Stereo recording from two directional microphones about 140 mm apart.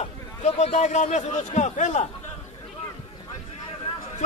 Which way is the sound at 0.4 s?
50° left (ahead or behind).